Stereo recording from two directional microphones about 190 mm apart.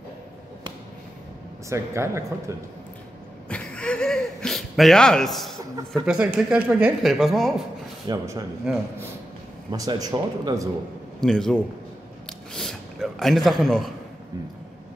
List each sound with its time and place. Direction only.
1.7 s speech: 15° right (ahead or behind)
3.4 s chuckle: 5° left (ahead or behind)
6.0 s speech: 5° right (ahead or behind)
8.1 s speech: 15° right (ahead or behind)
8.7 s speech: 5° right (ahead or behind)
9.7 s speech: 20° right (ahead or behind)
11.1 s a man's voice: 5° left (ahead or behind)